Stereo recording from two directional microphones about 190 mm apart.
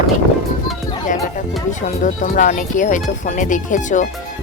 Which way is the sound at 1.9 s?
40° left (ahead or behind).